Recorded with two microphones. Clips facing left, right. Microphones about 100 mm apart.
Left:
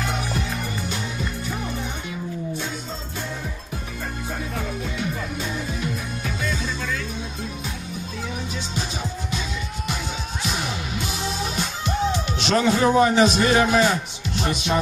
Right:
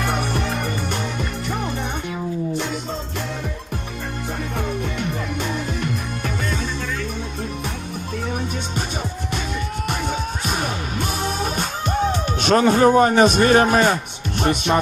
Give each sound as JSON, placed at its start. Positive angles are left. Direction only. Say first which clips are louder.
{"t": 0.0, "sound": "music", "louder": "right 4 dB", "side_deg": -60}
{"t": 4.8, "sound": "music", "louder": "right 2 dB", "side_deg": -60}
{"t": 9.8, "sound": "music", "louder": "right 6 dB", "side_deg": -55}